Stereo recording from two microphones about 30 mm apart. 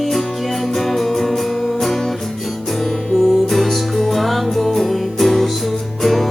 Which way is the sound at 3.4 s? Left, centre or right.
Centre.